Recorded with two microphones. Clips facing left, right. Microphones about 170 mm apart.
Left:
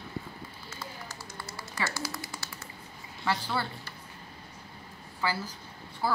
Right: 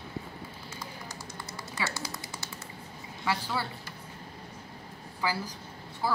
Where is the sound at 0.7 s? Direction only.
15° right (ahead or behind).